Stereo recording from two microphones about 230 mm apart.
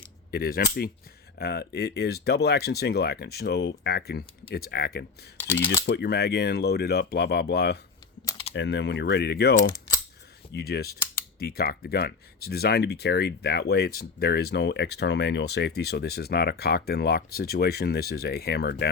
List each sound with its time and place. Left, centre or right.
0.3 s speech: left
5.5 s speech: left
5.8 s speech: left
8.3 s typing: left
8.5 s speech: left